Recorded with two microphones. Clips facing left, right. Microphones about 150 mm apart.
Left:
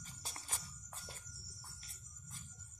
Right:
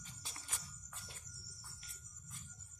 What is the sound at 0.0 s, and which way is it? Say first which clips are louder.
Music: left 3 dB; 40° left (ahead or behind).